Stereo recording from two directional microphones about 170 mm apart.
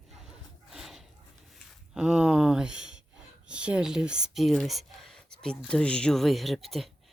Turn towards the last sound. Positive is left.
turn(degrees=0)  # may be behind; listen again after turning